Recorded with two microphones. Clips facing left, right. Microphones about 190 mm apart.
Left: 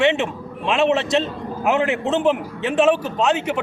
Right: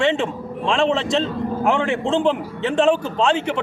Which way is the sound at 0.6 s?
5° left (ahead or behind).